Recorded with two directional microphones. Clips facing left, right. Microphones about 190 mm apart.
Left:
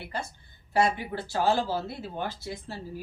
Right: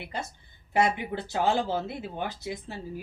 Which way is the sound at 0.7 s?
20° right (ahead or behind).